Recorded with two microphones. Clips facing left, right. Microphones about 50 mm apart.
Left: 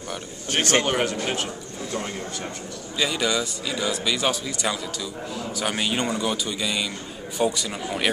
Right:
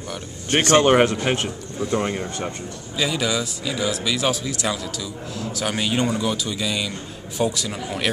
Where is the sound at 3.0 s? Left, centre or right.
Centre.